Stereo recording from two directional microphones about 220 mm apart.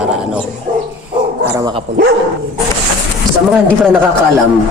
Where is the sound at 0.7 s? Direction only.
40° right (ahead or behind).